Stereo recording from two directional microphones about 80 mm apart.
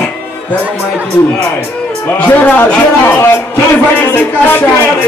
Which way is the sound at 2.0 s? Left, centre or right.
Left.